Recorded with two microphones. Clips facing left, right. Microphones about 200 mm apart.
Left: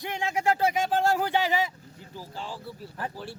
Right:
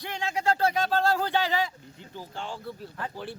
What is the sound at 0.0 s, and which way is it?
Speech, 20° left (ahead or behind).